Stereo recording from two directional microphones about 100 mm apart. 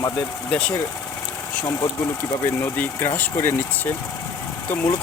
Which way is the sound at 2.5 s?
20° left (ahead or behind).